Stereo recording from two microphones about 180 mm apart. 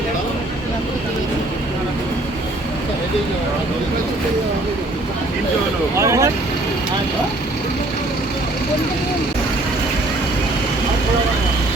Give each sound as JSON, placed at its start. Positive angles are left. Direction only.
{"t": 6.0, "sound": "speech", "side_deg": -15}